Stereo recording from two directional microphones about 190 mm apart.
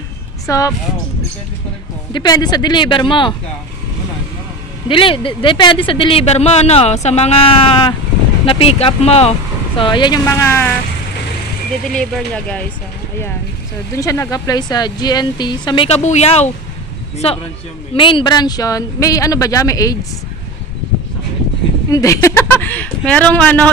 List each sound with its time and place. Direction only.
0.5 s speech: 15° left (ahead or behind)
2.1 s speech: 20° left (ahead or behind)
4.8 s speech: 25° left (ahead or behind)
11.9 s speech: 5° left (ahead or behind)
13.9 s speech: 15° left (ahead or behind)
21.9 s speech: 15° left (ahead or behind)